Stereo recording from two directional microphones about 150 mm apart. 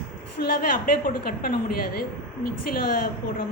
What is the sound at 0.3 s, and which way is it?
A woman's voice, 90° left.